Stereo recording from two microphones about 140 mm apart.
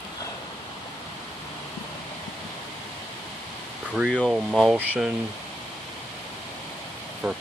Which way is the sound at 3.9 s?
5° right (ahead or behind).